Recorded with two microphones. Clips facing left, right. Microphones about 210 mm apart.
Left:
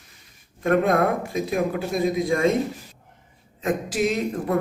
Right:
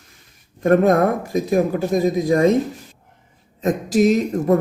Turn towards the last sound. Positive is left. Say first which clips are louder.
# right 7 dB
turn(degrees=-40)  # may be behind; listen again after turning